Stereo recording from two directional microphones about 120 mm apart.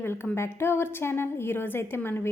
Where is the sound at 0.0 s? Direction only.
20° left (ahead or behind).